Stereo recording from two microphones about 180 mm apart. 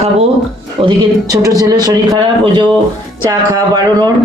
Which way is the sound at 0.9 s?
20° right (ahead or behind).